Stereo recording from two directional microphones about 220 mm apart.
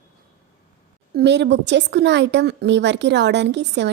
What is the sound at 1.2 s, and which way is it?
A woman's voice, 50° right (ahead or behind).